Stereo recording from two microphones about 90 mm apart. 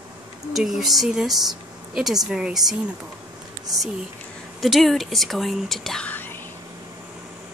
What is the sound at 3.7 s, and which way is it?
Speech, centre (ahead or behind).